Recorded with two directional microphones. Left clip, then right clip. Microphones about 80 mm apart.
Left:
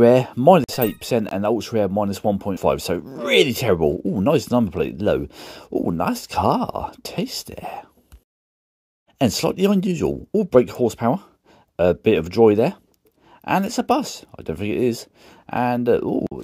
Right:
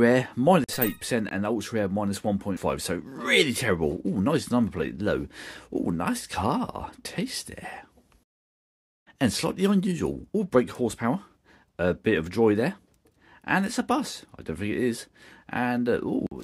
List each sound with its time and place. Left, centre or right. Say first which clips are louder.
0.0 s speech: left 8 dB; left
3.1 s speech: left 5 dB; left
3.4 s speech: left 7 dB; left
9.2 s speech: left 7 dB; left